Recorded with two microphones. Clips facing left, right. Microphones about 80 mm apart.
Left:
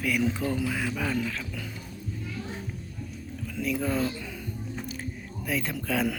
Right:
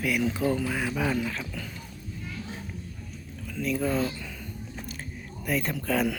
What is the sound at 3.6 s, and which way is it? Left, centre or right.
Speech, centre.